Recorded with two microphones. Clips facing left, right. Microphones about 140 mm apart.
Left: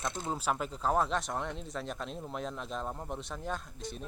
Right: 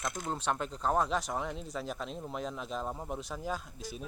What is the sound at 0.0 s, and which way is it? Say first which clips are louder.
Speech: left 1 dB; 30° left (ahead or behind).